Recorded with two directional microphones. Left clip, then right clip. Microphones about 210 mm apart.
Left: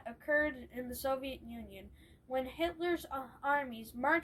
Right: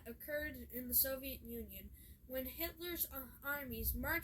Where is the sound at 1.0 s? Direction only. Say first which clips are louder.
Left 8 dB; 15° right (ahead or behind).